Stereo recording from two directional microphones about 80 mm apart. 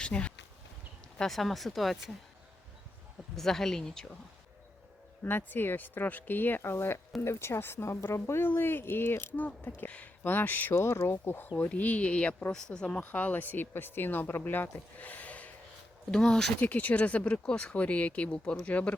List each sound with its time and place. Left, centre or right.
0.0 s speech: centre
1.2 s speech: centre
3.3 s speech: centre
5.2 s speech: left
11.1 s speech: left; by 16.5 s centre
16.6 s speech: centre